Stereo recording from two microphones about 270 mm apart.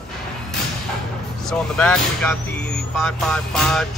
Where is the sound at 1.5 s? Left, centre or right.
Centre.